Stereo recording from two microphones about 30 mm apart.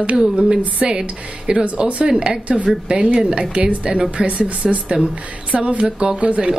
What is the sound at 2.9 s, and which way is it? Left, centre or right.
Speech, right.